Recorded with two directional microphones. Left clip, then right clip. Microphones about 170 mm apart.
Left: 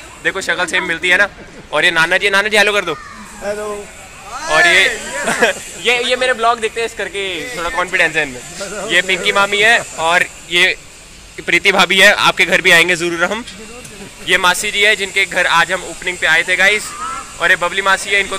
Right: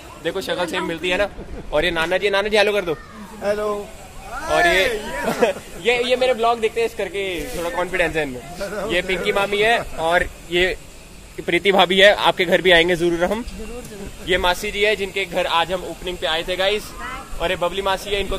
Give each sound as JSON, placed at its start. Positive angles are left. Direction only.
{"t": 0.2, "sound": "a man's voice", "side_deg": 0}
{"t": 3.4, "sound": "speech", "side_deg": -20}
{"t": 4.6, "sound": "speech", "side_deg": -10}
{"t": 10.0, "sound": "speech", "side_deg": -25}
{"t": 10.5, "sound": "speech", "side_deg": -35}
{"t": 11.4, "sound": "speech", "side_deg": -20}